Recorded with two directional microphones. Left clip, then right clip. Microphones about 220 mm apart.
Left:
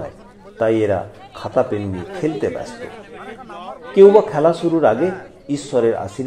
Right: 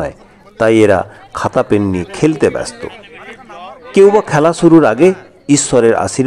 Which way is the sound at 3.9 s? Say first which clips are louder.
Right 2 dB; 40° right (ahead or behind).